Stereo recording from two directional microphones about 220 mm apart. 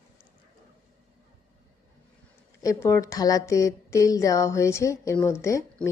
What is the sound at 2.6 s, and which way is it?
A woman's voice, 15° left (ahead or behind).